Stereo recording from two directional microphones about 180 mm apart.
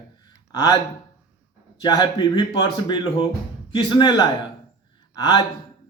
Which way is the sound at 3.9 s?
25° left (ahead or behind).